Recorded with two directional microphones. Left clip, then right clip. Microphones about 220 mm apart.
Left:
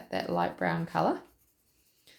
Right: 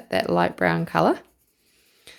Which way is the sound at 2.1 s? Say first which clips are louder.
Right 12 dB; 50° right (ahead or behind).